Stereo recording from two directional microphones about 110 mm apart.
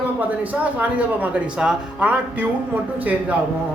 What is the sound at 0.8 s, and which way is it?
A woman's voice, 15° right (ahead or behind).